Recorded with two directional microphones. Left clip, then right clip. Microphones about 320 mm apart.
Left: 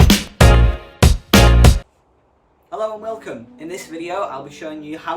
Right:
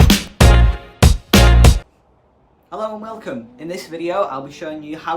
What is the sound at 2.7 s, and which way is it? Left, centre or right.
A man's voice, centre.